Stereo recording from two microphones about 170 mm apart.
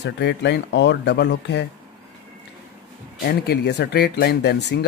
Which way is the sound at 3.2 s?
70° left (ahead or behind).